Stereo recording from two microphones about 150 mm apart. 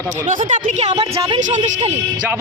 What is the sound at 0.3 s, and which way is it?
Speech, 55° right (ahead or behind).